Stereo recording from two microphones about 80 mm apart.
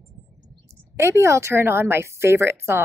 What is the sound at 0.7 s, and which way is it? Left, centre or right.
A woman's voice, right.